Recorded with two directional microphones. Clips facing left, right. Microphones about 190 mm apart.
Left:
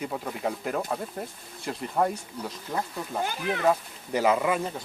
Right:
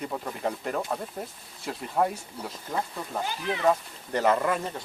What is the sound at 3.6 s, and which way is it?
Speech, 5° left (ahead or behind).